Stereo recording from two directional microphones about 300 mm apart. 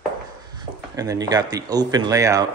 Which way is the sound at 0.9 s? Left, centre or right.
Centre.